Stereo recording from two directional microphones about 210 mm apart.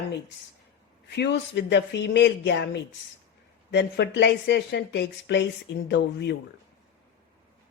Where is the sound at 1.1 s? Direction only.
55° left (ahead or behind).